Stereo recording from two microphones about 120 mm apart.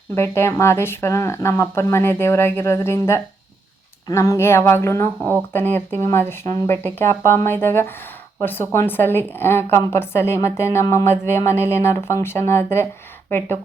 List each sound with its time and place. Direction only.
0.1 s a woman's voice: 20° left (ahead or behind)